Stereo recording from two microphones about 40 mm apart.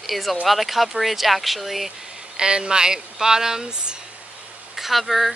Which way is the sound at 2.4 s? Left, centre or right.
Centre.